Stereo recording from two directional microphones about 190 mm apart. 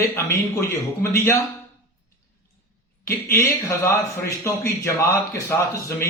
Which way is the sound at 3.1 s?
15° left (ahead or behind).